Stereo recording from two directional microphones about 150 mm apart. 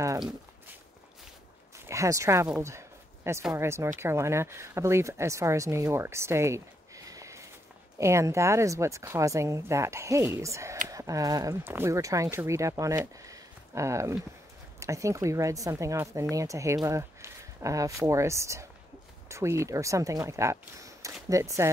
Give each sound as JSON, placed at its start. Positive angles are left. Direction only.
{"t": 1.9, "sound": "speech", "side_deg": -20}
{"t": 3.5, "sound": "speech", "side_deg": -20}
{"t": 7.1, "sound": "sniff", "side_deg": -20}
{"t": 8.0, "sound": "a woman's voice", "side_deg": -20}